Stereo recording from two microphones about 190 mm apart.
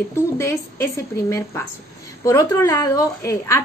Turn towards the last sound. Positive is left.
turn(degrees=15)  # may be behind; listen again after turning